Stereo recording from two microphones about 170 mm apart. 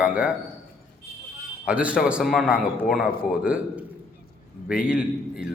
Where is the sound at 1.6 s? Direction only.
10° right (ahead or behind).